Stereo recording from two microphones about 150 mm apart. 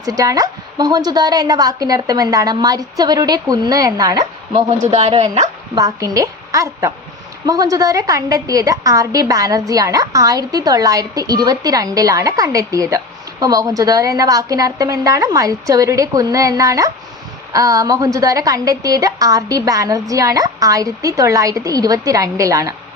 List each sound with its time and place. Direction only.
0.0 s a woman's voice: 25° right (ahead or behind)
4.5 s speech: 45° right (ahead or behind)
5.7 s a woman's voice: 20° right (ahead or behind)